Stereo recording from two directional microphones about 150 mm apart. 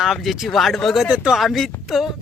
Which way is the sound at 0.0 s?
Centre (ahead or behind).